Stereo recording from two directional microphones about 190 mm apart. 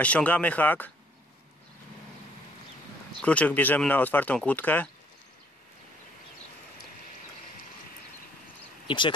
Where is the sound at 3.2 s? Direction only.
5° left (ahead or behind).